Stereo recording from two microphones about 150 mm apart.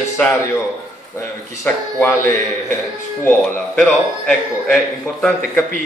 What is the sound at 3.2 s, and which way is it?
A man's voice, 5° left (ahead or behind).